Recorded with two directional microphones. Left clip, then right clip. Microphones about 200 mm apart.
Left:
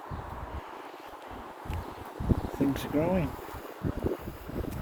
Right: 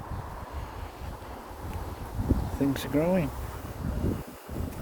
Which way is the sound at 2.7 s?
15° right (ahead or behind).